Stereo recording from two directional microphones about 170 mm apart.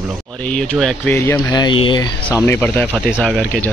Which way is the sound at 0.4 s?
5° left (ahead or behind).